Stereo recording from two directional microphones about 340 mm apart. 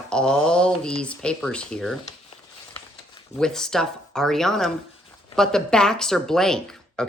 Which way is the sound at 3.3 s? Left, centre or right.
Centre.